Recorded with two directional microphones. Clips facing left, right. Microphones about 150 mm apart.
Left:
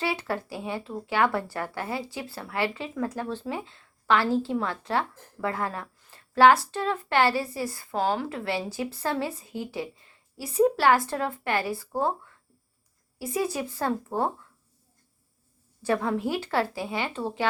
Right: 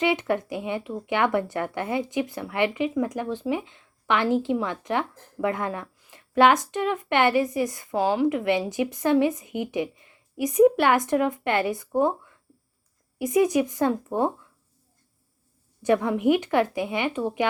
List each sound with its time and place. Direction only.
0.0 s speech: 20° right (ahead or behind)
13.1 s speech: 20° right (ahead or behind)
15.8 s speech: 20° right (ahead or behind)